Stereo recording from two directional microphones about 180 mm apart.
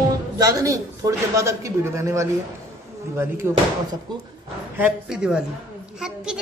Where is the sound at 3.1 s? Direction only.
15° right (ahead or behind).